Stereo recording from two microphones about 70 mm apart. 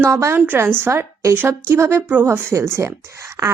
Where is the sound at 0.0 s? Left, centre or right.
Right.